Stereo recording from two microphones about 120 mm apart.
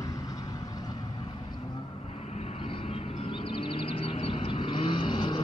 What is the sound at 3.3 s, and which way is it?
Vehicle, 45° left (ahead or behind).